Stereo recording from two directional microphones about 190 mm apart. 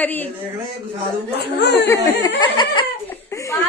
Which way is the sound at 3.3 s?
15° left (ahead or behind).